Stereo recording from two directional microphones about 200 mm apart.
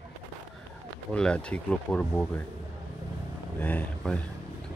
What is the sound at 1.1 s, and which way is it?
Speech, 5° left (ahead or behind).